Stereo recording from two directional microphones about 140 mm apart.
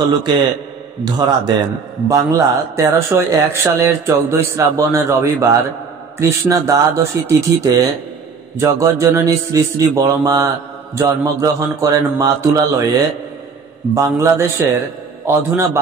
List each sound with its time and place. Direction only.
1.0 s a man's voice: 30° right (ahead or behind)